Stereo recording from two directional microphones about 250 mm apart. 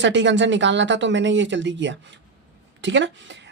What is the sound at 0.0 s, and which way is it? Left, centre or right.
Speech, right.